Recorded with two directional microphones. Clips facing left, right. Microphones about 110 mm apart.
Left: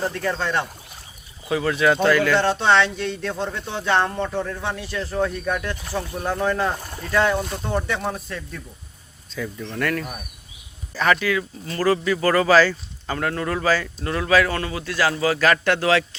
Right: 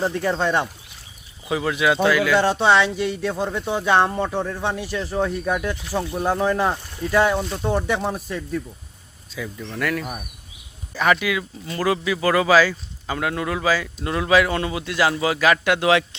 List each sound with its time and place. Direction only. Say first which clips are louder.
0.0 s speech: right 3 dB; 15° right (ahead or behind)
6.7 s a sound: left 5 dB; 50° left (ahead or behind)
7.1 s speech: right 1 dB; 15° right (ahead or behind)
9.6 s speech: even; centre (ahead or behind); by 16.0 s 15° right (ahead or behind)